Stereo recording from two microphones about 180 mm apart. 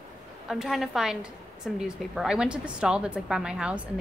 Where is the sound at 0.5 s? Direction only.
Centre (ahead or behind).